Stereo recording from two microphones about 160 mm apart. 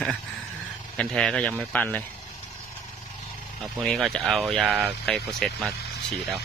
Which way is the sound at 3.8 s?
Centre (ahead or behind).